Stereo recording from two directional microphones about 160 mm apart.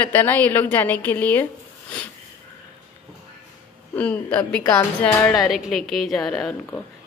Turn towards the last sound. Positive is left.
turn(degrees=0)  # may be behind; listen again after turning